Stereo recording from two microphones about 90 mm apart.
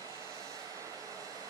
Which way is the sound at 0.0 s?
40° right (ahead or behind).